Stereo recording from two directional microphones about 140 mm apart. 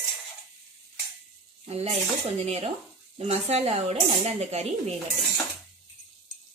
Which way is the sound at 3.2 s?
50° right (ahead or behind).